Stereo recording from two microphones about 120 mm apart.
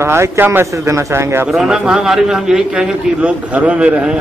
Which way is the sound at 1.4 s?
5° right (ahead or behind).